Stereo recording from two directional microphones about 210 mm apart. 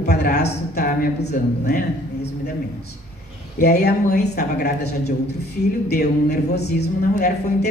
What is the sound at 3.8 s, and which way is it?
Speech, 50° left (ahead or behind).